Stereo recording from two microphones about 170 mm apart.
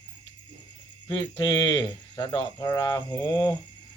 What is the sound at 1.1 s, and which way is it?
Speech, 25° left (ahead or behind).